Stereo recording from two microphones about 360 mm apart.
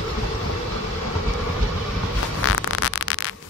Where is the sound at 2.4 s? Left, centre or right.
Left.